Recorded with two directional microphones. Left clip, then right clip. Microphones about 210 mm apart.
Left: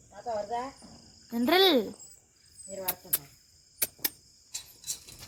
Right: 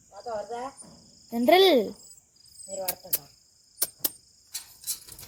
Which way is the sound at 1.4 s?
10° right (ahead or behind).